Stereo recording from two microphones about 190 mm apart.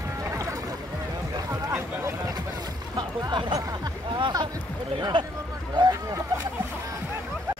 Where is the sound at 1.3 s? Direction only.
20° right (ahead or behind).